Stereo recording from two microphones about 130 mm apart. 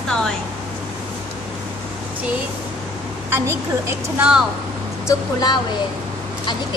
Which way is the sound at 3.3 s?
20° right (ahead or behind).